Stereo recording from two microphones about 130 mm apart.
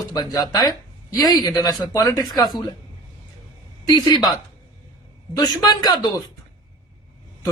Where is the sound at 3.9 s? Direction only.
35° left (ahead or behind).